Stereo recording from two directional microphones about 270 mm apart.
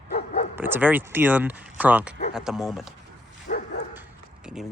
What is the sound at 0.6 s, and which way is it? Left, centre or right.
Speech, centre.